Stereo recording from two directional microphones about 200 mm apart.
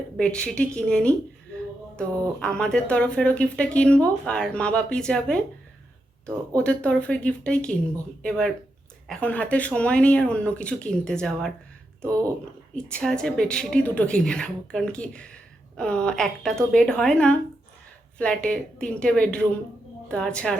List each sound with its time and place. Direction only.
0.2 s speech: 5° left (ahead or behind)
6.6 s speech: 5° left (ahead or behind)
12.0 s speech: 15° right (ahead or behind)
12.7 s speech: 5° left (ahead or behind)